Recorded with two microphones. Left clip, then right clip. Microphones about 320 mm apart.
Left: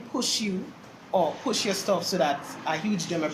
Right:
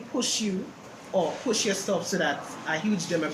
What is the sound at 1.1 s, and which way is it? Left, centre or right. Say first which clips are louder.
Speech: left 2 dB; left.